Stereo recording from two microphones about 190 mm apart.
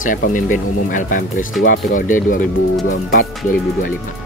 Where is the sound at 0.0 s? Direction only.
45° left (ahead or behind).